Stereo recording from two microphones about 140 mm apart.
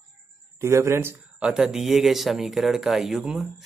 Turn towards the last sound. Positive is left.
turn(degrees=-5)  # may be behind; listen again after turning